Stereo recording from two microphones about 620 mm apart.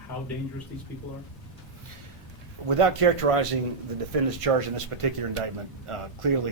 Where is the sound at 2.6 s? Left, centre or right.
Right.